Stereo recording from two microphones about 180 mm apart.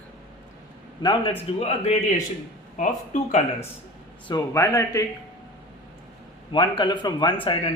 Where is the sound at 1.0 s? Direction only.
25° left (ahead or behind).